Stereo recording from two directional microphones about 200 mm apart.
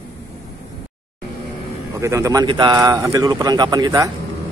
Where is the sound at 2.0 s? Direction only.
15° right (ahead or behind).